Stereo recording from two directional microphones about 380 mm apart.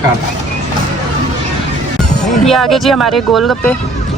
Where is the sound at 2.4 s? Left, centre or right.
Centre.